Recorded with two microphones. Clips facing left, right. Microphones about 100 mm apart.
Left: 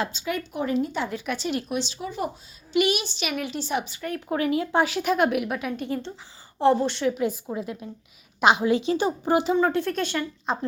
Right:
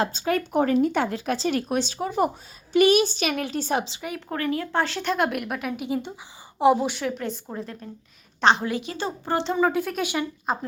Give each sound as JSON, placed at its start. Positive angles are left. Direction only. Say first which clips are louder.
{"t": 0.0, "sound": "a woman's voice", "louder": "right 4 dB", "side_deg": -45}
{"t": 4.3, "sound": "a woman's voice", "louder": "left 3 dB", "side_deg": 15}
{"t": 8.6, "sound": "speech", "louder": "left 6 dB", "side_deg": 20}
{"t": 9.6, "sound": "a woman's voice", "louder": "even", "side_deg": -5}